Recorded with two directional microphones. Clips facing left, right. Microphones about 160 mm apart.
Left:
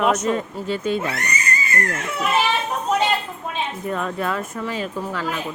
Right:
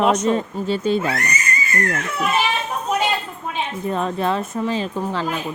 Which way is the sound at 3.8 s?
25° right (ahead or behind).